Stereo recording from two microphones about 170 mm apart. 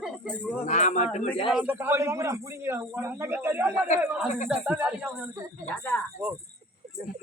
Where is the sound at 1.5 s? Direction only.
5° right (ahead or behind).